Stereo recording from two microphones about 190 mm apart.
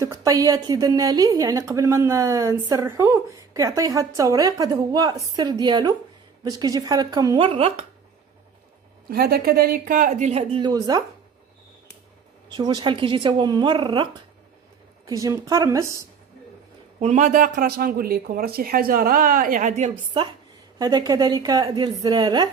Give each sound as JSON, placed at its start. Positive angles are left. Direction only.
{"t": 0.0, "sound": "a woman's voice", "side_deg": -15}
{"t": 9.0, "sound": "speech", "side_deg": -55}
{"t": 12.5, "sound": "a woman's voice", "side_deg": -20}
{"t": 17.0, "sound": "speech", "side_deg": -40}
{"t": 20.7, "sound": "a woman's voice", "side_deg": -20}